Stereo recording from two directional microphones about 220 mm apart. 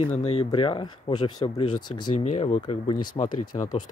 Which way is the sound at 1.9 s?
90° left.